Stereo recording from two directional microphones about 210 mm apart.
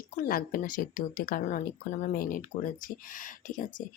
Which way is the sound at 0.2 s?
45° left (ahead or behind).